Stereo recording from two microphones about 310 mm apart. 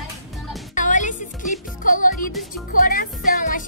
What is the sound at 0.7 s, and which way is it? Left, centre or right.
Music, left.